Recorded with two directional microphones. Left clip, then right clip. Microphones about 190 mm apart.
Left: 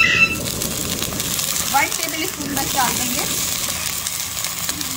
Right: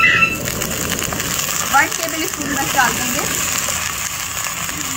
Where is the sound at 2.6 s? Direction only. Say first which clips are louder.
Right 4 dB; 35° left (ahead or behind).